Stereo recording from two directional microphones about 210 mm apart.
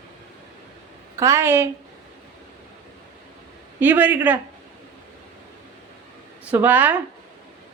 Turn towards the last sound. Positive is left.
turn(degrees=-10)  # may be behind; listen again after turning